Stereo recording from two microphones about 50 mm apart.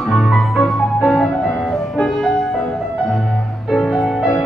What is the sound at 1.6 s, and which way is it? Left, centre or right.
Music, centre.